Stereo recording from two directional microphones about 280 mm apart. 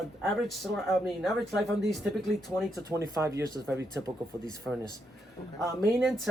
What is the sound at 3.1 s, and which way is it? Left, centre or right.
Speech, centre.